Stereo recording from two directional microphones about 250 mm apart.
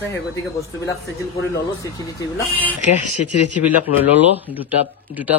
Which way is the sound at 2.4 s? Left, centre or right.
Centre.